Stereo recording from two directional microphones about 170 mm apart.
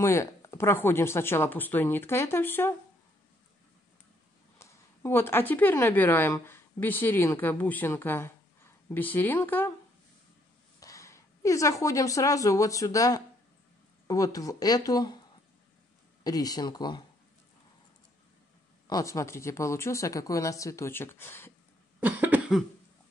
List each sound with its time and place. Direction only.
0.0 s a woman's voice: 15° left (ahead or behind)
4.6 s a woman's voice: 15° left (ahead or behind)
10.8 s a woman's voice: 20° left (ahead or behind)
16.3 s speech: 20° left (ahead or behind)
18.9 s a woman's voice: 20° left (ahead or behind)
22.0 s cough: 10° right (ahead or behind)